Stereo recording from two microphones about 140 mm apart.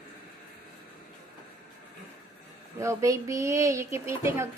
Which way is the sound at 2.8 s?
20° right (ahead or behind).